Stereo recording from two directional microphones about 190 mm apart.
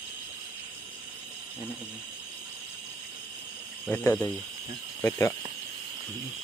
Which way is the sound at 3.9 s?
10° left (ahead or behind).